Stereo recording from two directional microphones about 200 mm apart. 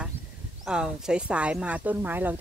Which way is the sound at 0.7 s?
5° right (ahead or behind).